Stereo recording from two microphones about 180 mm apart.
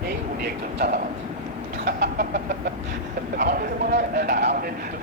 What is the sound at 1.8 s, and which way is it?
Chicken, 60° right (ahead or behind).